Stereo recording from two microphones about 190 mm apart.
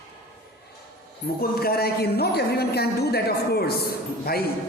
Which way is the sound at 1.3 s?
55° left (ahead or behind).